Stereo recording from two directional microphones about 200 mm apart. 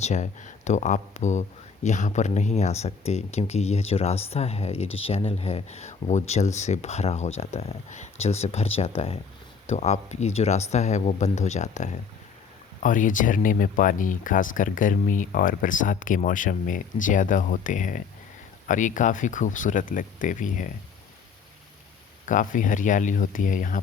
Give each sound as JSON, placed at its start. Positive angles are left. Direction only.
{"t": 0.0, "sound": "speech", "side_deg": 35}
{"t": 22.3, "sound": "speech", "side_deg": 40}